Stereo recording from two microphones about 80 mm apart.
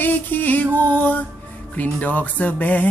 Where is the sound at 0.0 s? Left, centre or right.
Left.